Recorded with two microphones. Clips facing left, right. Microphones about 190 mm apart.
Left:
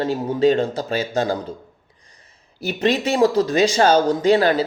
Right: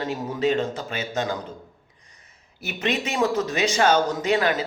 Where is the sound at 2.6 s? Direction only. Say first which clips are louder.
Left 7 dB; 35° left (ahead or behind).